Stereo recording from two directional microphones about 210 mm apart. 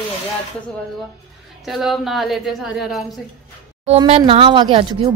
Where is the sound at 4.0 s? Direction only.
25° right (ahead or behind).